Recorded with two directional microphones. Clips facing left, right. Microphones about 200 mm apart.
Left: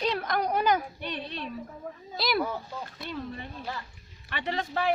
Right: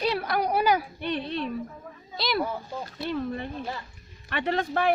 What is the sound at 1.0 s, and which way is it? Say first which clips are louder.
Speech: right 6 dB; 55° right (ahead or behind).